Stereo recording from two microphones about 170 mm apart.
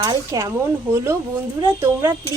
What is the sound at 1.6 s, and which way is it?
Speech, 15° right (ahead or behind).